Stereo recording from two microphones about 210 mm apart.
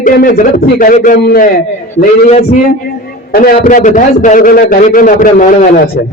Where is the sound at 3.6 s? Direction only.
35° left (ahead or behind).